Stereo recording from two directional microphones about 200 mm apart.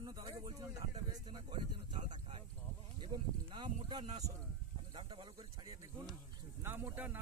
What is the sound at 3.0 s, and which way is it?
Speech, 25° right (ahead or behind).